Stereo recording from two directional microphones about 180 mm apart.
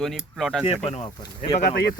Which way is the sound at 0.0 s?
Centre (ahead or behind).